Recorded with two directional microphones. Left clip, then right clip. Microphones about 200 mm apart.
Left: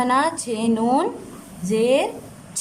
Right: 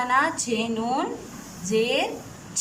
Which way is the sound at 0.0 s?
20° left (ahead or behind).